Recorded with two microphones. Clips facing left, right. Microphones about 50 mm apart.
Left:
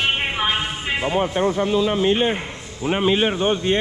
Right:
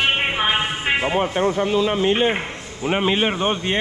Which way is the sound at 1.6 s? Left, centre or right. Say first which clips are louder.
Even; right.